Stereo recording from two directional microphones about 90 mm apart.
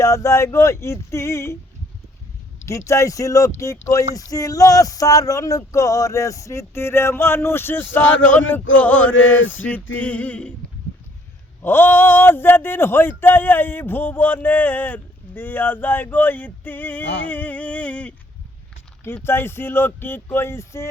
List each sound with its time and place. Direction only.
0.0 s speech: 35° left (ahead or behind)
2.6 s speech: 35° left (ahead or behind); by 10.5 s 15° left (ahead or behind)
11.6 s speech: 25° left (ahead or behind)
19.0 s speech: 25° left (ahead or behind)